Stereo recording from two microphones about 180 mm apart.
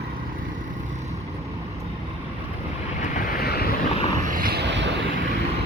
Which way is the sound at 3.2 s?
55° left (ahead or behind).